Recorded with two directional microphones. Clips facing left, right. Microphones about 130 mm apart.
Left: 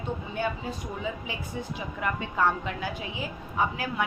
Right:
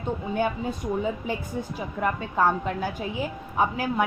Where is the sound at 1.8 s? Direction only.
40° right (ahead or behind).